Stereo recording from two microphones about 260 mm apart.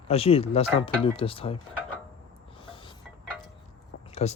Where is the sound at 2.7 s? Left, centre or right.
Centre.